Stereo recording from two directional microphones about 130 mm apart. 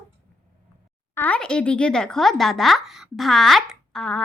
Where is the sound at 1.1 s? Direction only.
10° left (ahead or behind).